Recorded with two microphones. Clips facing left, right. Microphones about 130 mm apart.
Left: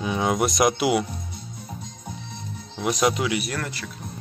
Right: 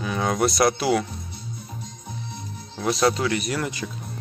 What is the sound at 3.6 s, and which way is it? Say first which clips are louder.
Speech: right 4 dB; 15° right (ahead or behind).